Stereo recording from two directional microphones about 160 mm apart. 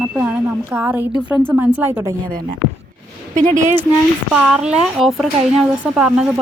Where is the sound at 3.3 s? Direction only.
50° right (ahead or behind).